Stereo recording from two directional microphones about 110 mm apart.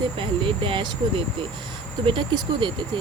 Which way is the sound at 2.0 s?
50° right (ahead or behind).